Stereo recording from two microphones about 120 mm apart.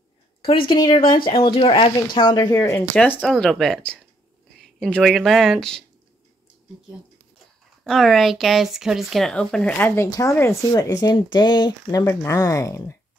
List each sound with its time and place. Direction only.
0.4 s speech: 45° left (ahead or behind)
1.3 s speech: 55° left (ahead or behind); by 2.8 s 25° left (ahead or behind)
2.9 s speech: 10° left (ahead or behind)
3.3 s speech: centre (ahead or behind)
7.8 s speech: centre (ahead or behind)
10.0 s speech: 30° left (ahead or behind)
12.0 s speech: 20° left (ahead or behind)